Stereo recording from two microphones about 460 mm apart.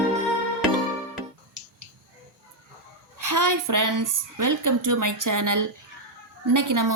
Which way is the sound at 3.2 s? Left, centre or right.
Right.